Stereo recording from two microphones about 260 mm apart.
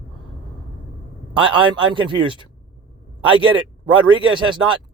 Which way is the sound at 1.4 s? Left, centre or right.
Centre.